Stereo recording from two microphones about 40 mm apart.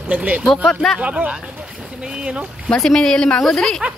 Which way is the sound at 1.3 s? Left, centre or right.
Centre.